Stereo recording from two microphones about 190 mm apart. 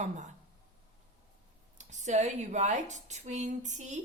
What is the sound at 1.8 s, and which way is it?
A woman's voice, 40° right (ahead or behind).